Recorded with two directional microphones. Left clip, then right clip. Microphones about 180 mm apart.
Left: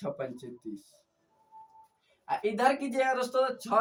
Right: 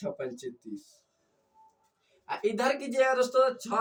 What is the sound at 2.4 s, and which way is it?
Speech, 15° left (ahead or behind).